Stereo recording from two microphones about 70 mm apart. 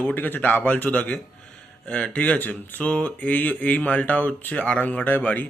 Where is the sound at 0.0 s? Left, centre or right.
Left.